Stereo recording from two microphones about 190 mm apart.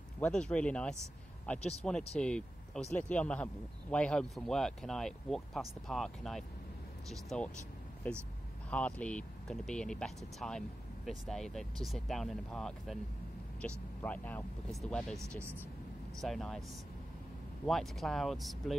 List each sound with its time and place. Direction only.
0.2 s speech: 5° left (ahead or behind)
1.6 s speech: 35° left (ahead or behind)
2.1 s speech: 5° left (ahead or behind)
16.2 s speech: centre (ahead or behind)
17.6 s speech: centre (ahead or behind)